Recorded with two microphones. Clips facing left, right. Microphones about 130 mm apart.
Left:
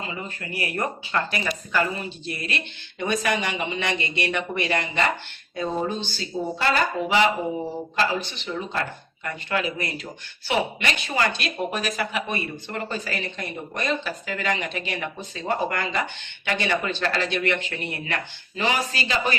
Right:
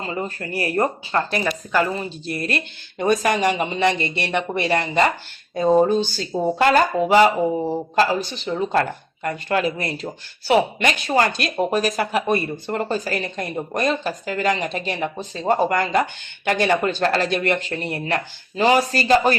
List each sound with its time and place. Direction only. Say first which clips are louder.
0.0 s speech: right 6 dB; 40° right (ahead or behind)